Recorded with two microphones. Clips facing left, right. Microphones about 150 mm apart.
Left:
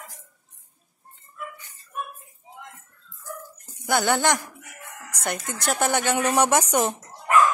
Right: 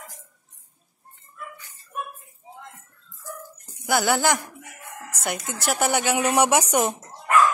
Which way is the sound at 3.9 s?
5° right (ahead or behind).